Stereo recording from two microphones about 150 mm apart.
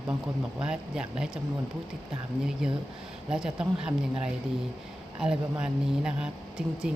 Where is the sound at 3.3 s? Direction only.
5° right (ahead or behind).